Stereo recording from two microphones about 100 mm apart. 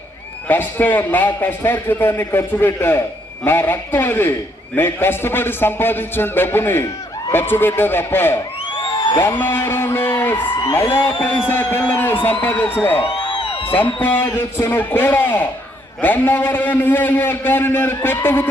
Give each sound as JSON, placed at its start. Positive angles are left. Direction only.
{"t": 0.4, "sound": "a man's voice", "side_deg": 20}
{"t": 9.0, "sound": "music", "side_deg": 50}
{"t": 9.4, "sound": "a man's voice", "side_deg": 20}
{"t": 13.0, "sound": "music", "side_deg": 55}
{"t": 13.7, "sound": "a man's voice", "side_deg": 15}